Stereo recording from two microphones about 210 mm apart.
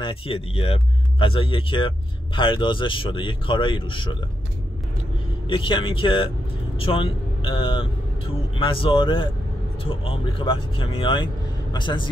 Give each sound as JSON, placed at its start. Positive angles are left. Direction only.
{"t": 0.0, "sound": "a man's voice", "side_deg": 25}
{"t": 5.5, "sound": "a man's voice", "side_deg": 25}